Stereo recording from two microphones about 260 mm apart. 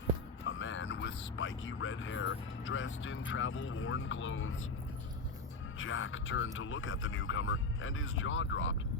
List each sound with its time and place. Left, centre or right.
0.4 s a sound: left
1.4 s speech: left
5.8 s speech: left